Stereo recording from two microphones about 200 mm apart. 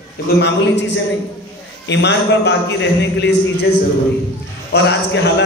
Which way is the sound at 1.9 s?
60° left (ahead or behind).